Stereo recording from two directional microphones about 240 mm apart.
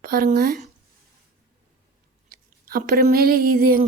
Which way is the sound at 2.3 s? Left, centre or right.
Right.